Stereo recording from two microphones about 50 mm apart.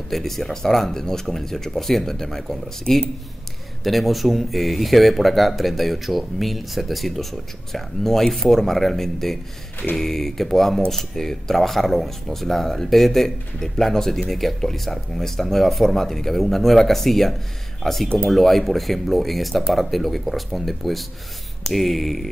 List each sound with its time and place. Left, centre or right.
0.1 s speech: centre
18.0 s speech: centre
18.3 s speech: centre